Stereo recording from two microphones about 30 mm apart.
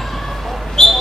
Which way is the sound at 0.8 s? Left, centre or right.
Centre.